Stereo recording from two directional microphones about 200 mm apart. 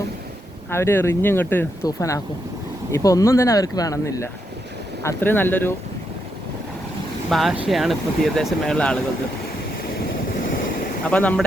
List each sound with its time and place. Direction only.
0.7 s speech: 10° left (ahead or behind)
7.3 s speech: centre (ahead or behind)
11.0 s speech: 5° left (ahead or behind)